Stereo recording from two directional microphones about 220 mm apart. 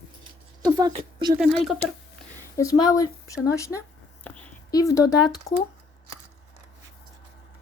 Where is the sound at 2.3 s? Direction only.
15° left (ahead or behind).